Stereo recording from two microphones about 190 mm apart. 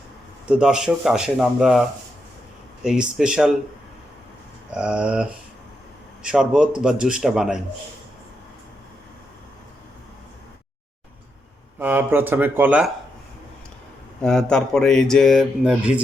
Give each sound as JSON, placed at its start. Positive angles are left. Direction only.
{"t": 0.4, "sound": "speech", "side_deg": -5}
{"t": 2.8, "sound": "speech", "side_deg": -5}
{"t": 4.7, "sound": "speech", "side_deg": -5}
{"t": 11.8, "sound": "speech", "side_deg": -10}
{"t": 14.2, "sound": "speech", "side_deg": 5}